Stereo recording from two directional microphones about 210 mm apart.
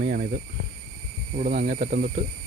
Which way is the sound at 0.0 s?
45° right (ahead or behind).